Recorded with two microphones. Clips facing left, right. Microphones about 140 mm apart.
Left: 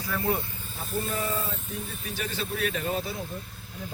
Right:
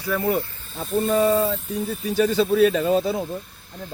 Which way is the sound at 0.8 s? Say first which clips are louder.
Right 11 dB; 90° right.